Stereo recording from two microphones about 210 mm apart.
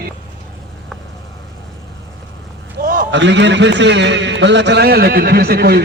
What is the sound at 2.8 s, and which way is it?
A man's voice, 45° right (ahead or behind).